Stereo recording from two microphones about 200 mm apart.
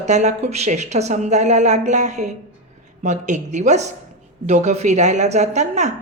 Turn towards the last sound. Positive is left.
turn(degrees=-35)  # may be behind; listen again after turning